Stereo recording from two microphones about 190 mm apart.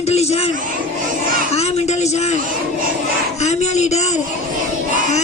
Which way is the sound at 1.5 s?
35° left (ahead or behind).